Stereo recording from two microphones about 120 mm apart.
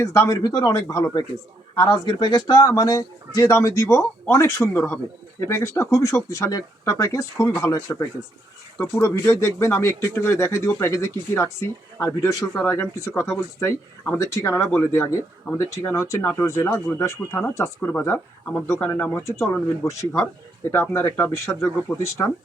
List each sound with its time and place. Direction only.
0.0 s speech: 25° left (ahead or behind)